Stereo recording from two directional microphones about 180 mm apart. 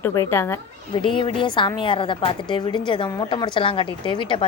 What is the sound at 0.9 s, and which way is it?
A woman's voice, 25° left (ahead or behind).